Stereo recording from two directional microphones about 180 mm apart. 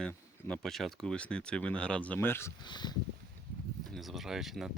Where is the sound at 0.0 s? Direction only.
5° left (ahead or behind).